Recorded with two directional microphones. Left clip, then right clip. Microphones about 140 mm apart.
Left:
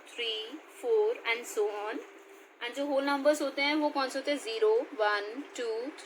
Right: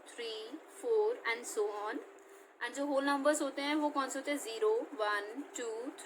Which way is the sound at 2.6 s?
35° left (ahead or behind).